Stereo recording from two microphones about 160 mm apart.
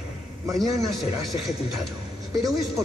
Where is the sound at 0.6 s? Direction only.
Centre (ahead or behind).